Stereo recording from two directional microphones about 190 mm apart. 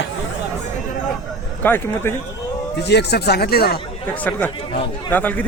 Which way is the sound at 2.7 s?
60° left (ahead or behind).